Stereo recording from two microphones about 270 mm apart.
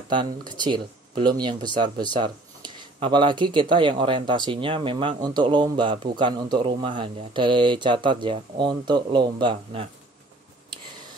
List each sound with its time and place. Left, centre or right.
0.5 s speech: centre